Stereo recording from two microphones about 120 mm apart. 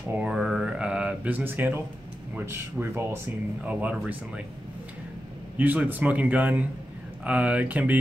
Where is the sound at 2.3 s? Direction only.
20° right (ahead or behind).